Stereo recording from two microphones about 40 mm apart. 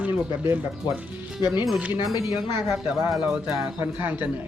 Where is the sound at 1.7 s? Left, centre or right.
Right.